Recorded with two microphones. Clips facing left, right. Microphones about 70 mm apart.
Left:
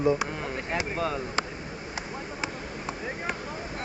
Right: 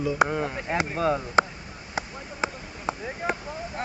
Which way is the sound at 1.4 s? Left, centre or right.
Right.